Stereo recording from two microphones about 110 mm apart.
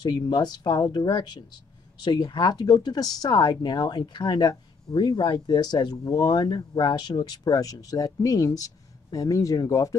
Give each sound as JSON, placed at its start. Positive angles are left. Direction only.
{"t": 0.0, "sound": "speech", "side_deg": 40}